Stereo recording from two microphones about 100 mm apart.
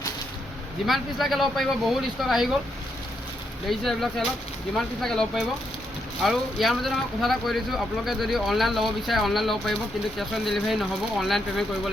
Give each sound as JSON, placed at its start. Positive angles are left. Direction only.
{"t": 0.9, "sound": "speech", "side_deg": 0}
{"t": 3.7, "sound": "speech", "side_deg": 0}